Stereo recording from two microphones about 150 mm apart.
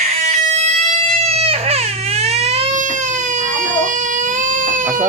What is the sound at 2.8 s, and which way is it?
Baby cry, 55° right (ahead or behind).